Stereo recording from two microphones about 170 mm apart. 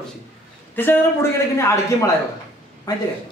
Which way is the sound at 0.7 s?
10° left (ahead or behind).